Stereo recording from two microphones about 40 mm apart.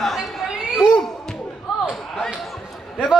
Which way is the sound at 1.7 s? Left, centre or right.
Centre.